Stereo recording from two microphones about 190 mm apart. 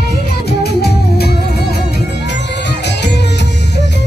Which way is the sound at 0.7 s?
60° left (ahead or behind).